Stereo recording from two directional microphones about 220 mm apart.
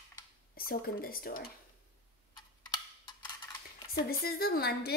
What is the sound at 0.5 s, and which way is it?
Speech, 40° left (ahead or behind).